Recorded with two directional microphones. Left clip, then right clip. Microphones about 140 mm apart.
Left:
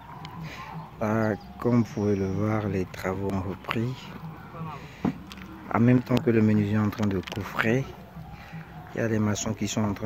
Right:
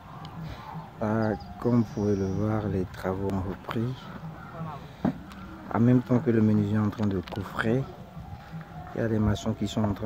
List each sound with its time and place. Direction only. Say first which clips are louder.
0.9 s speech: left 2 dB; 5° right (ahead or behind)
2.0 s speech: left 1 dB; 15° left (ahead or behind)
2.4 s speech: left 1 dB; centre (ahead or behind)
5.7 s speech: left 1 dB; 5° right (ahead or behind)
8.9 s speech: left 1 dB; 5° right (ahead or behind)